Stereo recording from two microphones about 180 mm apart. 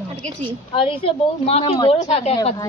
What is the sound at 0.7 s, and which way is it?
Speech, 30° left (ahead or behind).